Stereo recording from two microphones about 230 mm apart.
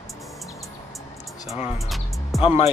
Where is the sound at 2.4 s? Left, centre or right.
Left.